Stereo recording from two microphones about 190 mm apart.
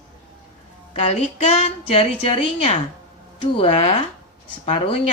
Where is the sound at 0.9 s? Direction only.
35° left (ahead or behind).